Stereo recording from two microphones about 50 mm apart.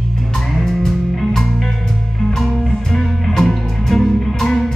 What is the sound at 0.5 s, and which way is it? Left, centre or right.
Music, centre.